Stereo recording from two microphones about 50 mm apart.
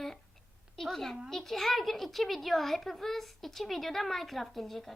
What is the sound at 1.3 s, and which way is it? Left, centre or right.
A child's voice, centre.